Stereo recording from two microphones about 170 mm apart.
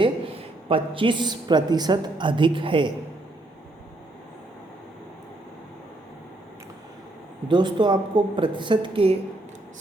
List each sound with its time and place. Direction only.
0.7 s a woman's voice: 30° right (ahead or behind)
7.4 s a woman's voice: 25° right (ahead or behind)